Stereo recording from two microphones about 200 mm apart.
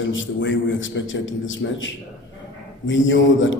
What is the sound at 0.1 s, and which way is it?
A man's voice, 70° left (ahead or behind).